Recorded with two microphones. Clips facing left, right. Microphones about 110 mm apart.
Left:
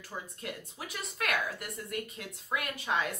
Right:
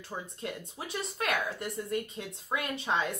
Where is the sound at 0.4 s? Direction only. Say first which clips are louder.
Right 3 dB; 30° right (ahead or behind).